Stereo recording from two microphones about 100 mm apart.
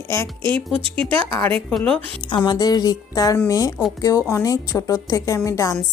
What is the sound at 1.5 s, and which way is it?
Speech, 10° left (ahead or behind).